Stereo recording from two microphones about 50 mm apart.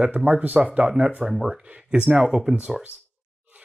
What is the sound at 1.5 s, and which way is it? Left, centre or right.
Speech, right.